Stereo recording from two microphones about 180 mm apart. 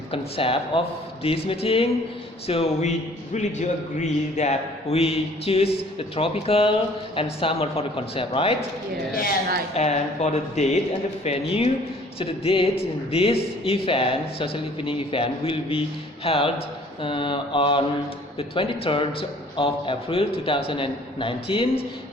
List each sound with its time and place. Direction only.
0.1 s speech: 30° left (ahead or behind)
9.7 s a man's voice: 40° left (ahead or behind)